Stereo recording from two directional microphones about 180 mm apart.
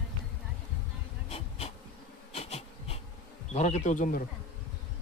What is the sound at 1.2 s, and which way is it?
Bee, 35° left (ahead or behind).